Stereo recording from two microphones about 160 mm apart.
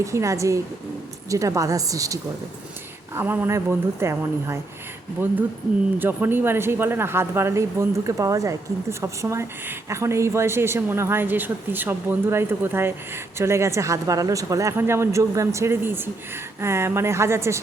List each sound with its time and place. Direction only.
0.0 s a woman's voice: 20° right (ahead or behind)
3.2 s speech: 15° right (ahead or behind)
6.0 s speech: 10° right (ahead or behind)